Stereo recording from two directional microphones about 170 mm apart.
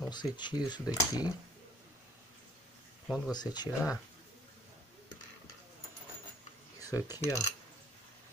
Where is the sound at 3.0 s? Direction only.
5° right (ahead or behind).